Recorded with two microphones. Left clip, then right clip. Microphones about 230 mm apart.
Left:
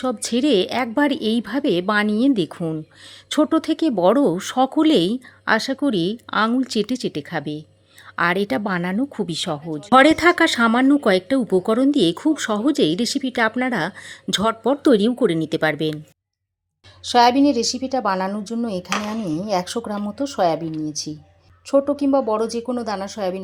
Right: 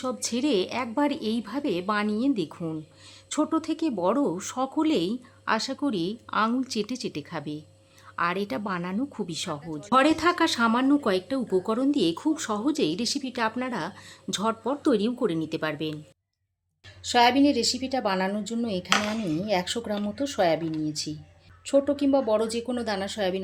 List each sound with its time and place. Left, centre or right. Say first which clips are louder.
0.0 s speech: left 7 dB; left
17.1 s speech: left 6 dB; left